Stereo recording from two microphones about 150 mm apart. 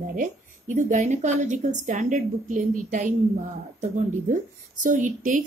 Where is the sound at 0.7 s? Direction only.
55° right (ahead or behind).